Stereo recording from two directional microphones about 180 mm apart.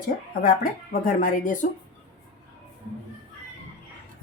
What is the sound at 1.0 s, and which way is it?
Speech, 50° left (ahead or behind).